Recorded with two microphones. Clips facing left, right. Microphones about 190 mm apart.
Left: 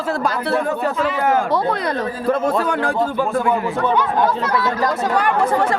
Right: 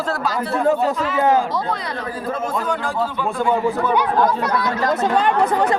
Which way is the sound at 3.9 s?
15° right (ahead or behind).